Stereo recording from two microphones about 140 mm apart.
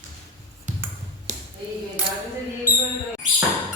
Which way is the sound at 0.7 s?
60° right (ahead or behind).